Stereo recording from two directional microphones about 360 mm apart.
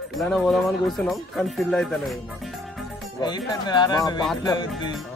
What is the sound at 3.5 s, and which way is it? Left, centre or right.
Speech, centre.